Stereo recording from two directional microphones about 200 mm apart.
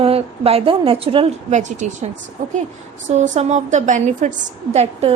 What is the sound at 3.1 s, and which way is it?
A woman's voice, 35° right (ahead or behind).